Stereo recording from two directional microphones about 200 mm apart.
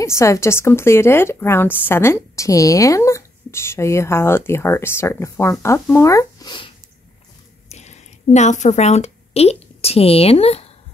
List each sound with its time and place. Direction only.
0.0 s speech: 15° left (ahead or behind)
7.7 s a woman's voice: 35° left (ahead or behind)